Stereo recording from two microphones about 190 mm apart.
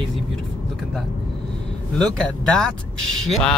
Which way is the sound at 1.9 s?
5° left (ahead or behind).